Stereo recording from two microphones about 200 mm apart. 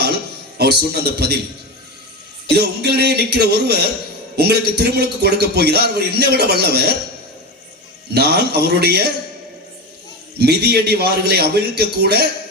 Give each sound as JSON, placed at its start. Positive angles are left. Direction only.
{"t": 0.6, "sound": "a man's voice", "side_deg": -55}
{"t": 2.5, "sound": "a man's voice", "side_deg": -55}
{"t": 8.1, "sound": "a man's voice", "side_deg": -55}
{"t": 10.4, "sound": "a man's voice", "side_deg": -55}